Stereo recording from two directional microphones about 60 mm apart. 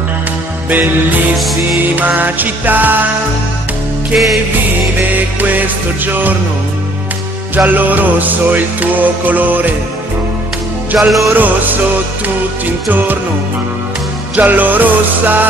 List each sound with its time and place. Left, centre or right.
0.7 s music: right
1.4 s music: centre
2.0 s music: right
5.1 s music: right
7.5 s music: right
11.0 s music: centre
11.3 s music: right
14.3 s music: right